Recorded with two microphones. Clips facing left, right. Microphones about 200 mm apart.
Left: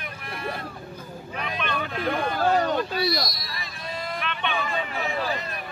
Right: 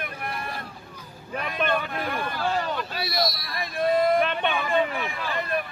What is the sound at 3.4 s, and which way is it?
Basketball bounce, 55° right (ahead or behind).